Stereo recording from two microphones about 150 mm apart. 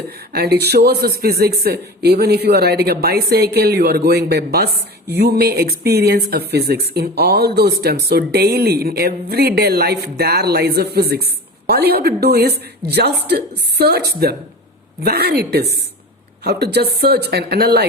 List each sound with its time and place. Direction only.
0.3 s speech: 90° right